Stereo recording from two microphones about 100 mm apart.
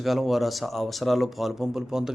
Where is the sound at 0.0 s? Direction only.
Centre (ahead or behind).